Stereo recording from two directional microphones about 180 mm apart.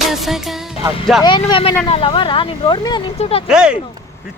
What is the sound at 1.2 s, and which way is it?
Speech, 25° left (ahead or behind).